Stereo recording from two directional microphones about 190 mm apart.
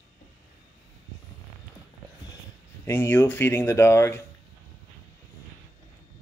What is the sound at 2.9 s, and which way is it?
Speech, 10° left (ahead or behind).